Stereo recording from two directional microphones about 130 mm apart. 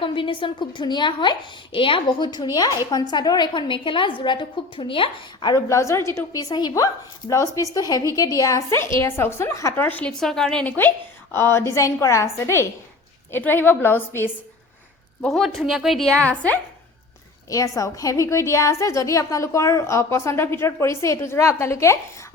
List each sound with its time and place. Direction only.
0.0 s a woman's voice: 40° left (ahead or behind); by 14.3 s 15° left (ahead or behind)
15.2 s a woman's voice: centre (ahead or behind)
17.5 s a woman's voice: 25° left (ahead or behind)